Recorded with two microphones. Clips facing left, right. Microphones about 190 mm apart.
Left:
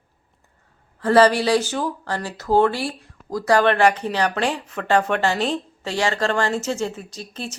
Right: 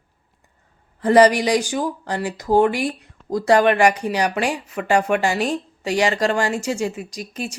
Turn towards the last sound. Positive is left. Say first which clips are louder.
# right 3 dB
turn(degrees=-15)  # may be behind; listen again after turning